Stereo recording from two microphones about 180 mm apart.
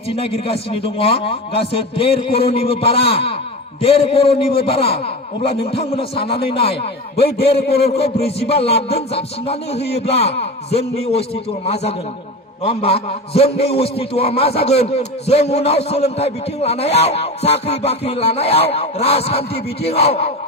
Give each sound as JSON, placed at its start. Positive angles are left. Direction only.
{"t": 0.1, "sound": "a man's voice", "side_deg": 35}
{"t": 7.2, "sound": "a man's voice", "side_deg": 60}
{"t": 7.9, "sound": "a man's voice", "side_deg": 35}